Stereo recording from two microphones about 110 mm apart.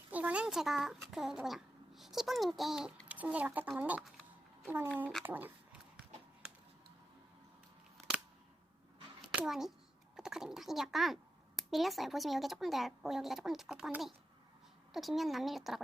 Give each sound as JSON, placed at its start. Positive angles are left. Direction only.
{"t": 0.1, "sound": "a child's voice", "side_deg": -15}
{"t": 9.3, "sound": "a child's voice", "side_deg": -5}